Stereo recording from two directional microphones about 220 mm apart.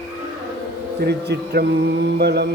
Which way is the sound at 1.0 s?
45° right (ahead or behind).